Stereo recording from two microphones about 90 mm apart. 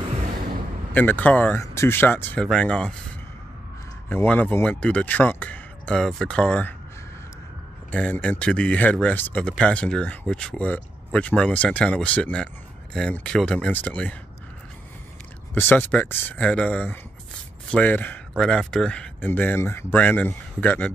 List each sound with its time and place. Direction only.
0.9 s speech: 20° left (ahead or behind)
1.6 s speech: 30° left (ahead or behind)
2.4 s speech: 10° left (ahead or behind)
4.1 s speech: 20° left (ahead or behind)
7.9 s speech: 15° left (ahead or behind)
15.5 s speech: 20° left (ahead or behind)
18.4 s speech: 10° left (ahead or behind)
19.2 s speech: 20° left (ahead or behind)